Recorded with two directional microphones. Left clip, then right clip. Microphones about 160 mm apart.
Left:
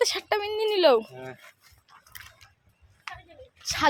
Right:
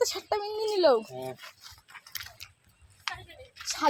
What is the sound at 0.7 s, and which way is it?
Speech, 35° left (ahead or behind).